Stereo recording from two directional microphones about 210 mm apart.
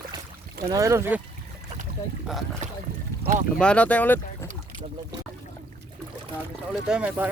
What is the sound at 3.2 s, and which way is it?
Speech, 35° right (ahead or behind).